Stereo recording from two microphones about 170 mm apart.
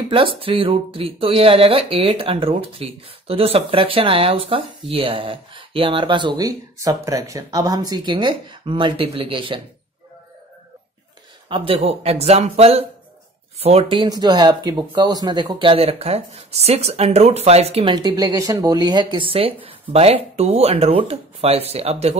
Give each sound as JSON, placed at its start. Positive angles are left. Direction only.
{"t": 0.1, "sound": "speech", "side_deg": -30}
{"t": 11.4, "sound": "speech", "side_deg": -30}
{"t": 17.9, "sound": "speech", "side_deg": -25}